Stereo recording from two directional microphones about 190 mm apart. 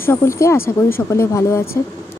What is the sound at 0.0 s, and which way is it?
Speech, 15° left (ahead or behind).